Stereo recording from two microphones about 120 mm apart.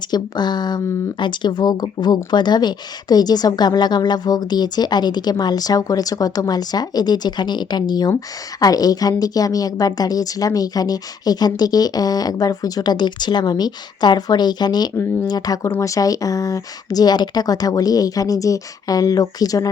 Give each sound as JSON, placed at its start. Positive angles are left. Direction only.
{"t": 0.1, "sound": "speech", "side_deg": 35}